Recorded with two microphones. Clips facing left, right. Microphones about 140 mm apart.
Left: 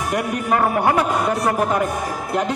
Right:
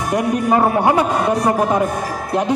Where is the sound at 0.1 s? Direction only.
25° right (ahead or behind).